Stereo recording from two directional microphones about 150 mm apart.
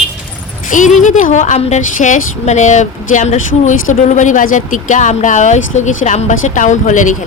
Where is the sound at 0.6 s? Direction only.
60° left (ahead or behind).